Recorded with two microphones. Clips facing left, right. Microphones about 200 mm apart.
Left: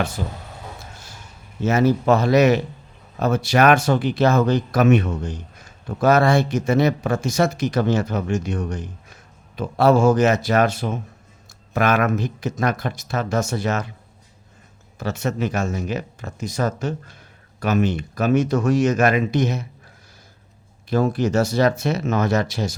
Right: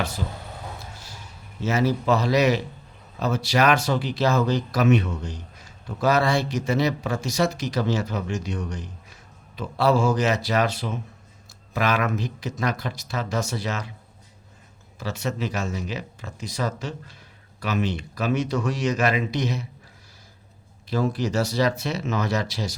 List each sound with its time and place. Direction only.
0.2 s speech: 50° left (ahead or behind)
1.6 s speech: 50° left (ahead or behind)
14.9 s speech: 50° left (ahead or behind)
20.9 s speech: 50° left (ahead or behind)